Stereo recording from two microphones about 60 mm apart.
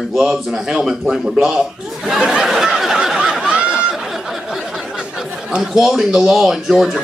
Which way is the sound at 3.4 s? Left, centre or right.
Centre.